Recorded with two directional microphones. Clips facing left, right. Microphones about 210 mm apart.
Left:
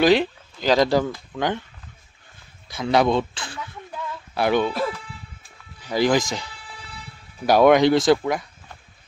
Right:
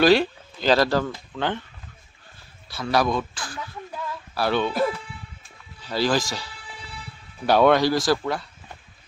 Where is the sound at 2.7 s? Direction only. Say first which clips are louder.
Left 4 dB; 20° left (ahead or behind).